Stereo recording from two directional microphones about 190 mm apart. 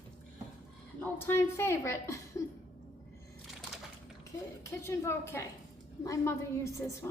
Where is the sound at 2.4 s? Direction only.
15° left (ahead or behind).